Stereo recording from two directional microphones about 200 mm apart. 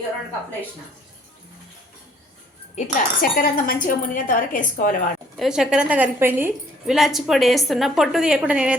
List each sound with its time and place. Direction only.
2.7 s speech: 40° left (ahead or behind)
5.4 s a woman's voice: 5° right (ahead or behind)